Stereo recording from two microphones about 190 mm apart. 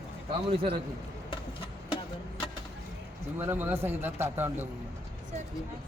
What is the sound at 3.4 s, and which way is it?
Speech, 10° right (ahead or behind).